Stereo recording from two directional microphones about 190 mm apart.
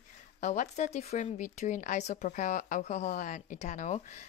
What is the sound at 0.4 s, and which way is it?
Speech, 40° left (ahead or behind).